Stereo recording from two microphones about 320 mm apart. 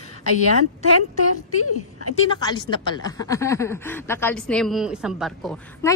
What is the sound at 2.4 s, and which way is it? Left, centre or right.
A woman's voice, centre.